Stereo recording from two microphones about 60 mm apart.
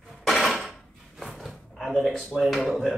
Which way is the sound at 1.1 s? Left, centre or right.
Centre.